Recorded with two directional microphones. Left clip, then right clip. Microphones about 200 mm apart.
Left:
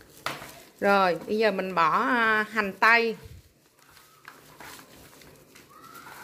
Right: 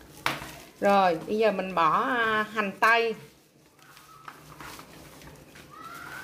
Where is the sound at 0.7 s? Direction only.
25° left (ahead or behind).